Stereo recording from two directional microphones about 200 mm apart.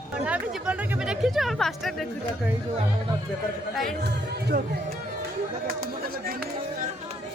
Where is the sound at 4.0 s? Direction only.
55° right (ahead or behind).